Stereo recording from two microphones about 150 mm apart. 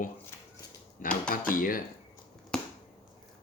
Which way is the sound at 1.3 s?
65° left (ahead or behind).